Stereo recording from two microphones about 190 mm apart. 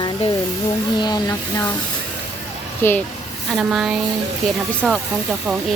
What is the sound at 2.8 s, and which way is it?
Speech, 10° left (ahead or behind).